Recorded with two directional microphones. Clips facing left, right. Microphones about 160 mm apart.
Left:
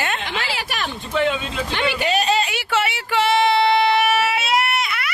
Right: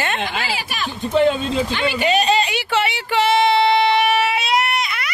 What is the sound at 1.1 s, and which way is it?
Speech, 35° right (ahead or behind).